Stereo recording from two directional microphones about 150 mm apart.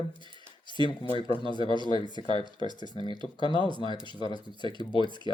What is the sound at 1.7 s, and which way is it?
Speech, 30° right (ahead or behind).